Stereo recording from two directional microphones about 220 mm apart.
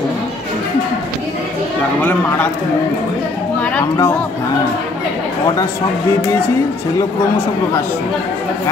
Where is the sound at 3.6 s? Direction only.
10° left (ahead or behind).